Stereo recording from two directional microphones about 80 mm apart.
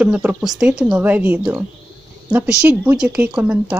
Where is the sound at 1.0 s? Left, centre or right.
Right.